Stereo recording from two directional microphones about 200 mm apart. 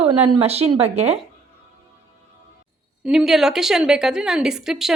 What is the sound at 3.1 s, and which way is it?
A woman's voice, centre (ahead or behind).